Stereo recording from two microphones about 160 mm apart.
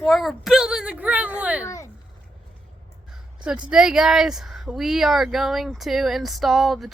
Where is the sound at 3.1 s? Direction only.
5° right (ahead or behind).